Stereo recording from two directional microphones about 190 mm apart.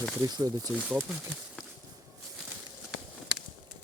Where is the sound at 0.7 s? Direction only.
10° left (ahead or behind).